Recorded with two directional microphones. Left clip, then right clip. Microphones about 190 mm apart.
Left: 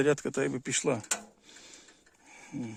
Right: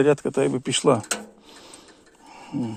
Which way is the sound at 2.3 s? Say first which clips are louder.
Right 10 dB; 5° left (ahead or behind).